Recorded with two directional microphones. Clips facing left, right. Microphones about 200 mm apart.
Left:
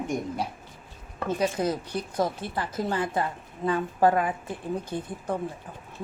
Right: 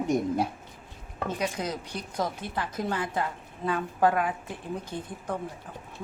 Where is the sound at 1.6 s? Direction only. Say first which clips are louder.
Left 6 dB; 10° left (ahead or behind).